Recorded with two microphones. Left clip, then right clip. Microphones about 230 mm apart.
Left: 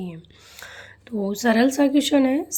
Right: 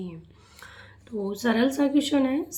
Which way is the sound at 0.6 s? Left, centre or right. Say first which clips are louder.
Left 6 dB; left.